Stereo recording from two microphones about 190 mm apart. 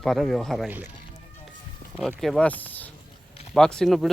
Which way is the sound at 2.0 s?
Centre (ahead or behind).